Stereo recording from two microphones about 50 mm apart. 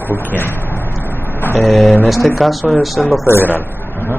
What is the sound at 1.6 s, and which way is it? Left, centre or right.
Speech, centre.